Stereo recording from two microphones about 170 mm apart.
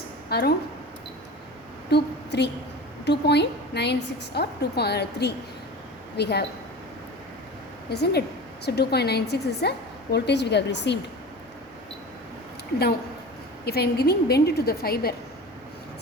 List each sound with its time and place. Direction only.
0.3 s speech: 70° left (ahead or behind)
1.9 s a woman's voice: 90° left
7.9 s a woman's voice: 70° left (ahead or behind); by 10.9 s 90° left
13.7 s a woman's voice: 70° left (ahead or behind)